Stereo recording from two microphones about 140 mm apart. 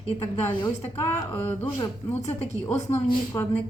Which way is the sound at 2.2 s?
55° left (ahead or behind).